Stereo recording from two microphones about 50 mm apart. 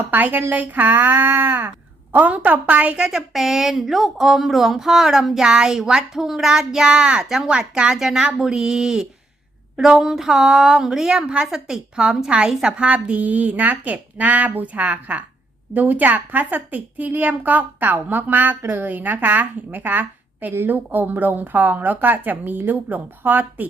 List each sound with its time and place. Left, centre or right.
0.1 s a woman's voice: right
2.1 s a woman's voice: right
3.1 s a woman's voice: centre; by 23.6 s right